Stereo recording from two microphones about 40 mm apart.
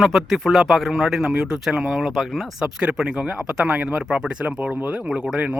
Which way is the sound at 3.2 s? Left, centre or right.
Right.